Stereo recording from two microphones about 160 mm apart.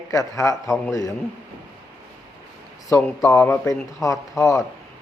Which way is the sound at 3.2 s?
20° left (ahead or behind).